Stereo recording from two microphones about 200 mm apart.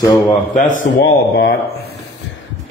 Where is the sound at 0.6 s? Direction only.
40° left (ahead or behind).